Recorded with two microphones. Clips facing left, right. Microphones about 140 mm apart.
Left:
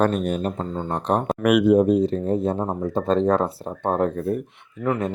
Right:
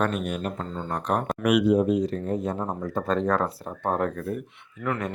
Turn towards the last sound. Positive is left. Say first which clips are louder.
# left 5 dB
turn(degrees=25)  # may be behind; listen again after turning